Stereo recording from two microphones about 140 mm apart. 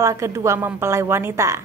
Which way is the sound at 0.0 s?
20° right (ahead or behind).